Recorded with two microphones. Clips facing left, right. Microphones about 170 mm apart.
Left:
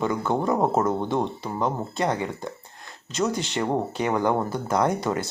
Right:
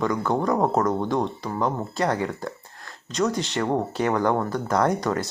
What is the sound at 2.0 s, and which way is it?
Speech, 20° left (ahead or behind).